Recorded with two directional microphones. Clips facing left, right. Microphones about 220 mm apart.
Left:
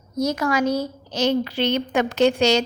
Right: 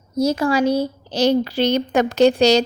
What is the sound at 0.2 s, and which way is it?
A woman's voice, 30° right (ahead or behind).